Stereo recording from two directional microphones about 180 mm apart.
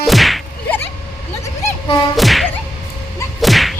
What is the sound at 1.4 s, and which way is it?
Vehicle, 15° left (ahead or behind).